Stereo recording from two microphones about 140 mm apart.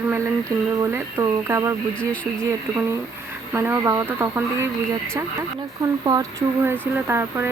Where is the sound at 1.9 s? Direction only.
10° left (ahead or behind).